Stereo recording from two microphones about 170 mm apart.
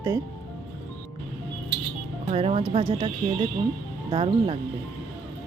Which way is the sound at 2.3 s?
35° right (ahead or behind).